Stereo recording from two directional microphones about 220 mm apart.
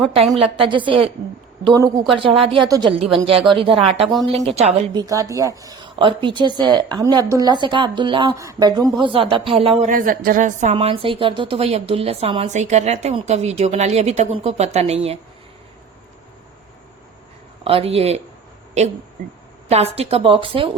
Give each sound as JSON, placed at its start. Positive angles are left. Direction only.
{"t": 0.3, "sound": "a woman's voice", "side_deg": -25}
{"t": 4.0, "sound": "a woman's voice", "side_deg": 0}
{"t": 4.3, "sound": "a woman's voice", "side_deg": -30}
{"t": 5.0, "sound": "a woman's voice", "side_deg": -15}
{"t": 9.9, "sound": "a woman's voice", "side_deg": -40}
{"t": 17.6, "sound": "a woman's voice", "side_deg": -25}
{"t": 19.6, "sound": "a woman's voice", "side_deg": -30}